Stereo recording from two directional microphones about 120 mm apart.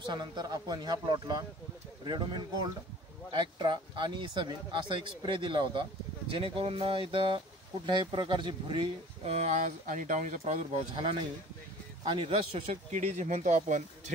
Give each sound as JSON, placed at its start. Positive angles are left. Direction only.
{"t": 0.0, "sound": "speech", "side_deg": -40}
{"t": 9.3, "sound": "speech", "side_deg": -70}
{"t": 12.0, "sound": "speech", "side_deg": -45}
{"t": 12.9, "sound": "speech", "side_deg": -75}